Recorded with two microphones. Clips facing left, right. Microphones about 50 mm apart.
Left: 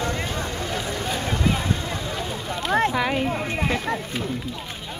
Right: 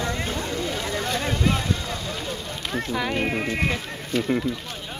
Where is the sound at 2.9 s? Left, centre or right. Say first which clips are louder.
Left 3 dB; centre.